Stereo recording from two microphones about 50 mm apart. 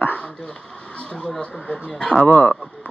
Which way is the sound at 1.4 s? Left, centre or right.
Left.